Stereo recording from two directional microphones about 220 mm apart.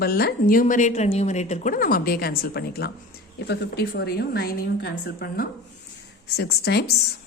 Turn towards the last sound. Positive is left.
turn(degrees=45)  # may be behind; listen again after turning